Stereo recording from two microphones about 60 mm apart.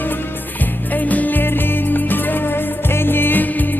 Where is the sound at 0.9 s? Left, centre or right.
Left.